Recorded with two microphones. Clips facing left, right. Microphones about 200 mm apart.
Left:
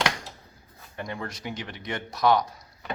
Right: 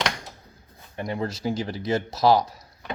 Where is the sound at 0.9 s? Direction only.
25° right (ahead or behind).